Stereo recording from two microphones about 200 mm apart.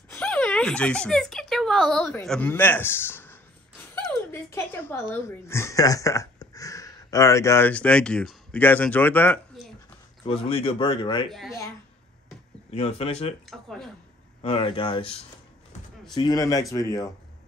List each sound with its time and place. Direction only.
0.1 s speech: 5° left (ahead or behind)
10.2 s speech: 30° left (ahead or behind)
11.2 s speech: centre (ahead or behind)
12.7 s speech: 30° left (ahead or behind)
13.5 s speech: centre (ahead or behind)
14.4 s speech: 25° left (ahead or behind)
16.2 s a man's voice: 20° left (ahead or behind)